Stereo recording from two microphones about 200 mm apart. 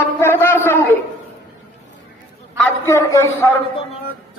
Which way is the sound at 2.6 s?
15° left (ahead or behind).